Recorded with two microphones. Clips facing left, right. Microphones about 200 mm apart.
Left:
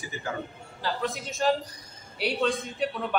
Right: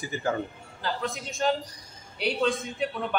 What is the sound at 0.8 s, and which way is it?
A man's voice, centre (ahead or behind).